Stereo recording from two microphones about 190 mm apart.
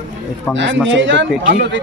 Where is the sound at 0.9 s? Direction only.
70° right (ahead or behind).